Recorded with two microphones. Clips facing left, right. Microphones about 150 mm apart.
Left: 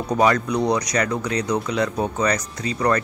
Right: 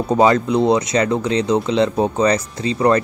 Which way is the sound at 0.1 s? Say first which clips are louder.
Right 4 dB; 25° right (ahead or behind).